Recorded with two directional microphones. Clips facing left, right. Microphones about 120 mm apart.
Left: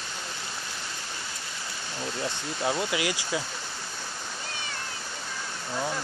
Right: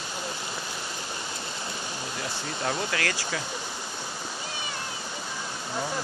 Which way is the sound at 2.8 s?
15° left (ahead or behind).